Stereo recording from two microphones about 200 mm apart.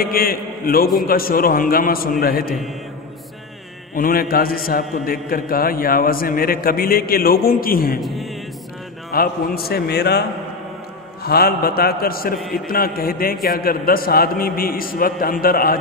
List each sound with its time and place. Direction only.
0.0 s a man's voice: 45° left (ahead or behind)
3.9 s a man's voice: 45° left (ahead or behind)
8.0 s speech: centre (ahead or behind)
9.1 s a man's voice: 50° left (ahead or behind)
11.2 s a man's voice: 50° left (ahead or behind)